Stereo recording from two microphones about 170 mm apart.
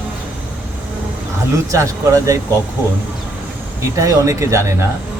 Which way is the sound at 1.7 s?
20° right (ahead or behind).